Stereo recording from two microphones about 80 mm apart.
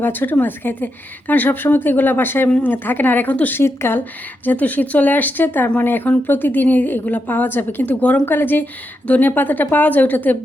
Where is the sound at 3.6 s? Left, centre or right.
Left.